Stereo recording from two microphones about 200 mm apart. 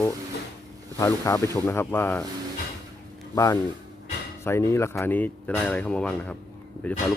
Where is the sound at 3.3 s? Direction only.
15° left (ahead or behind).